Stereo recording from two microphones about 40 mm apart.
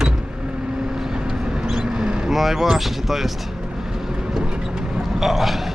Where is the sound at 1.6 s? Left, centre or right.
Centre.